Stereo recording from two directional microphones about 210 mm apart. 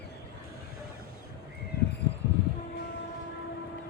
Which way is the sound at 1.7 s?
50° left (ahead or behind).